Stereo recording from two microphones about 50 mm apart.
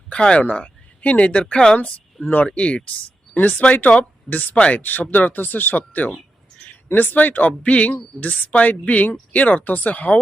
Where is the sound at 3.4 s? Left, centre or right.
Left.